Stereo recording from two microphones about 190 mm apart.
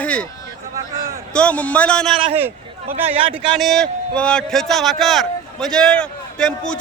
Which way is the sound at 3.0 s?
30° right (ahead or behind).